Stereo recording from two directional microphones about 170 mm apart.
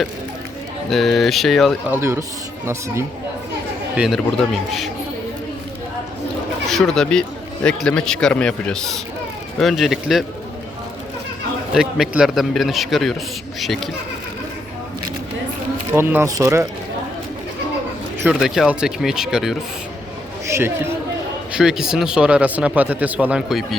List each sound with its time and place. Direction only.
0.9 s a man's voice: centre (ahead or behind)
1.9 s speech: 15° right (ahead or behind)
3.9 s a man's voice: 5° right (ahead or behind)
6.7 s a man's voice: centre (ahead or behind)
11.7 s a man's voice: 5° right (ahead or behind)
15.9 s speech: 15° right (ahead or behind)
18.2 s a man's voice: 5° right (ahead or behind)
20.5 s speech: 15° right (ahead or behind)
21.5 s speech: 5° right (ahead or behind)